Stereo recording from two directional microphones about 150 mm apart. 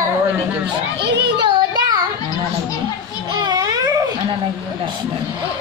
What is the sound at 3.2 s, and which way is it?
Children playing, 30° right (ahead or behind).